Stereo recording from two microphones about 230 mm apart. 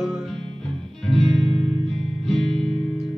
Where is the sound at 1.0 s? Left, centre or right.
Centre.